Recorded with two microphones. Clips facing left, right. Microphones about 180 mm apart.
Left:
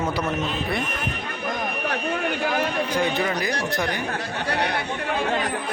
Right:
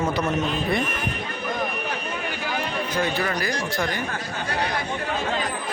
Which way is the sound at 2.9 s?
15° left (ahead or behind).